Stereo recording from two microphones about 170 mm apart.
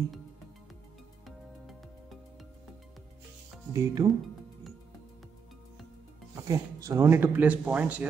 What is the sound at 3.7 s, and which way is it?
Speech, 20° right (ahead or behind).